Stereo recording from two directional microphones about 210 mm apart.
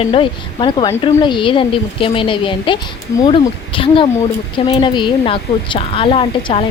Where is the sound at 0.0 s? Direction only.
25° left (ahead or behind).